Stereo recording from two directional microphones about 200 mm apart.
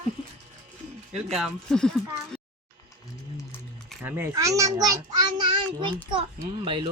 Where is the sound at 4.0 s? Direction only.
10° right (ahead or behind).